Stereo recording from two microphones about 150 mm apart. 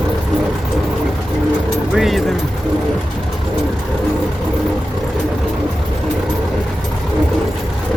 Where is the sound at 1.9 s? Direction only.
Centre (ahead or behind).